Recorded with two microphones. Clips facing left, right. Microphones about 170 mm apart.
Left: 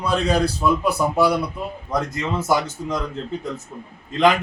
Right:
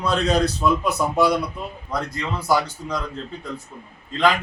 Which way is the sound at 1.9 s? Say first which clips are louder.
Left 3 dB; 20° left (ahead or behind).